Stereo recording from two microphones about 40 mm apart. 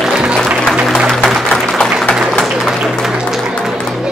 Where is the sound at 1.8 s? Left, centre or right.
Left.